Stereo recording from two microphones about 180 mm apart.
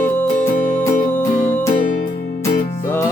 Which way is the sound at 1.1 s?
15° left (ahead or behind).